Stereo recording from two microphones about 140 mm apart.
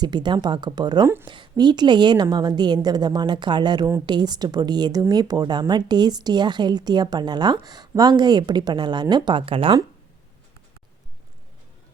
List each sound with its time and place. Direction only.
0.0 s speech: 30° right (ahead or behind)
1.0 s speech: 15° right (ahead or behind)
1.3 s speech: 30° right (ahead or behind)